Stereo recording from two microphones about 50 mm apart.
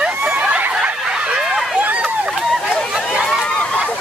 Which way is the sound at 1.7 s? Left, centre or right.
Right.